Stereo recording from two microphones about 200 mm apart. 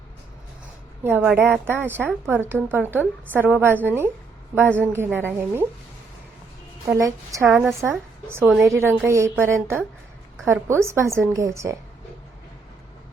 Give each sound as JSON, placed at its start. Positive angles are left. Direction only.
{"t": 1.0, "sound": "a woman's voice", "side_deg": -10}
{"t": 6.8, "sound": "a woman's voice", "side_deg": -15}
{"t": 7.4, "sound": "a woman's voice", "side_deg": 0}
{"t": 7.7, "sound": "a woman's voice", "side_deg": -15}